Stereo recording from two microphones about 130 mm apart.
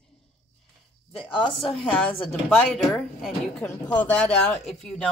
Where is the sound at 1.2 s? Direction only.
40° left (ahead or behind).